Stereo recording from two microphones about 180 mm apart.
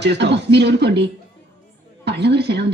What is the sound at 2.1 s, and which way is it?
Speech, 70° right (ahead or behind).